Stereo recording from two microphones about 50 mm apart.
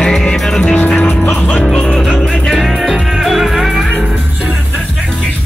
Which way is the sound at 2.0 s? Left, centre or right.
Centre.